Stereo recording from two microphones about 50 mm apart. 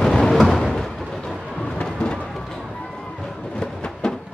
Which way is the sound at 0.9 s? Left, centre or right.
Centre.